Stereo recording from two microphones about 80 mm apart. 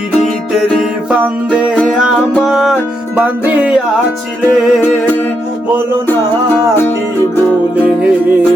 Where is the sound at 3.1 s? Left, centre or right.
Centre.